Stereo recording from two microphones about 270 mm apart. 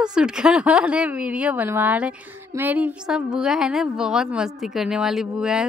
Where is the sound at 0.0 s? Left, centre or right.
Centre.